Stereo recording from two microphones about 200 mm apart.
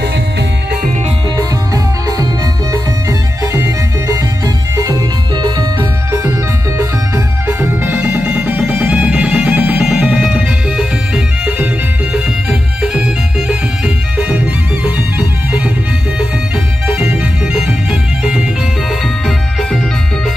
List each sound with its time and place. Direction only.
2.7 s music: 15° right (ahead or behind)
7.4 s music: 10° right (ahead or behind)
16.8 s music: 5° right (ahead or behind)